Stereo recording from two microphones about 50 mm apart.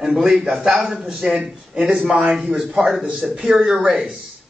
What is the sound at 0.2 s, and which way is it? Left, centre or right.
Speech, centre.